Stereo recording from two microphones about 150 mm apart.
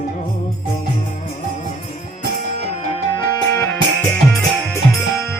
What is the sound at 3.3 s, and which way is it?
Music, 20° left (ahead or behind).